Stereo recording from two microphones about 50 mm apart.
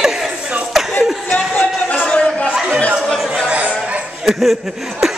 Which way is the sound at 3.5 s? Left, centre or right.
Right.